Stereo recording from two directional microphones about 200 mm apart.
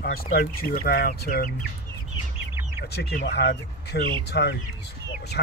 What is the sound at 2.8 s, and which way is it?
Speech, 50° left (ahead or behind).